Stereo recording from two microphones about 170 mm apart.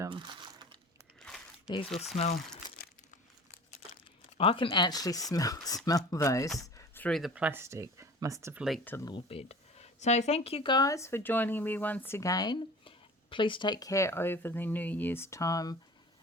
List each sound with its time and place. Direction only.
0.1 s crumpling: 25° right (ahead or behind)
1.2 s a sound: centre (ahead or behind)
2.7 s crumpling: 60° left (ahead or behind)
4.4 s speech: 30° left (ahead or behind)
6.6 s a sound: 20° left (ahead or behind)
7.0 s speech: centre (ahead or behind); by 8.6 s 15° right (ahead or behind)
8.8 s speech: 10° left (ahead or behind)
9.0 s speech: 30° left (ahead or behind)